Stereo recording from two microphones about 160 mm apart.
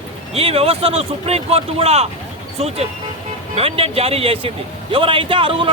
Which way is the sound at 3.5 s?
35° right (ahead or behind).